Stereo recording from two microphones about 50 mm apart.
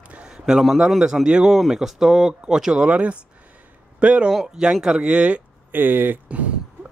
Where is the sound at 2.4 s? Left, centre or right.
Centre.